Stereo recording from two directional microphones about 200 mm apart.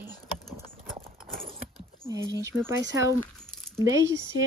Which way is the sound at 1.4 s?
30° right (ahead or behind).